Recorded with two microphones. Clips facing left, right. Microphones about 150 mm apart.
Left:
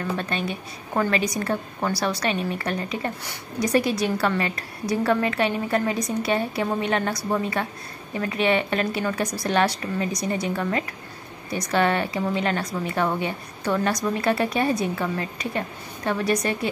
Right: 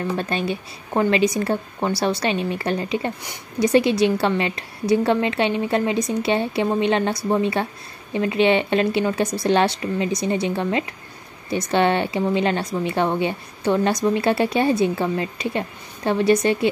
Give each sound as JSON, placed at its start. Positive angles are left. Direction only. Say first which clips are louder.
{"t": 0.2, "sound": "a woman's voice", "louder": "right 4 dB", "side_deg": -35}